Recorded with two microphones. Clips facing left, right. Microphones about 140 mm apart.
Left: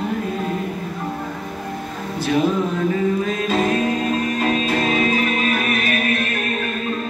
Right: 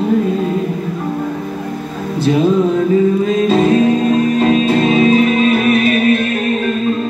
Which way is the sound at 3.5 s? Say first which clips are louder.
Right 8 dB; 25° right (ahead or behind).